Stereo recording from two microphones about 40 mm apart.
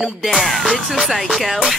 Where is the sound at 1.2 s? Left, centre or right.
Centre.